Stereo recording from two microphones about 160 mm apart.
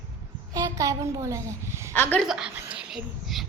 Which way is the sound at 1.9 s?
10° left (ahead or behind).